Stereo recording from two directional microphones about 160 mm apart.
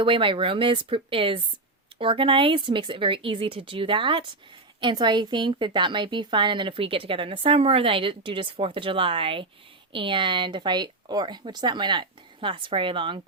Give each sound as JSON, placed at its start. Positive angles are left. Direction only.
{"t": 0.0, "sound": "speech", "side_deg": -30}